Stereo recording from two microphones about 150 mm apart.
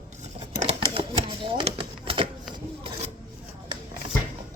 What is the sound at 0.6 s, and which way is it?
Typewriter, 40° right (ahead or behind).